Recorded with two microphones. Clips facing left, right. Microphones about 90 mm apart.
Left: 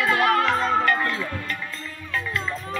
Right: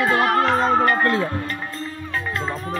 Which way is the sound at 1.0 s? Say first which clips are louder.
Right 7 dB; 50° right (ahead or behind).